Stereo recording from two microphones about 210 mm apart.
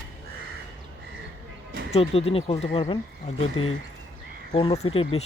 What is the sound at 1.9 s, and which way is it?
Speech, 30° left (ahead or behind).